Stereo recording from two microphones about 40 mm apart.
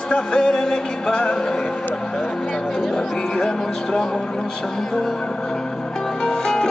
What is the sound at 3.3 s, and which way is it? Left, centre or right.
Music, left.